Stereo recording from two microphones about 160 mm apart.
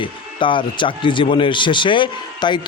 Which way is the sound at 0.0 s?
30° left (ahead or behind).